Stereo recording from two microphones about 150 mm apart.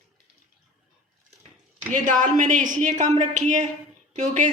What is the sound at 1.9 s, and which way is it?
A woman's voice, 60° right (ahead or behind).